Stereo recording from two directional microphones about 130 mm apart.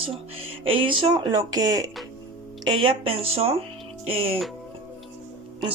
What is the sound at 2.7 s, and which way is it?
Speech, 40° right (ahead or behind).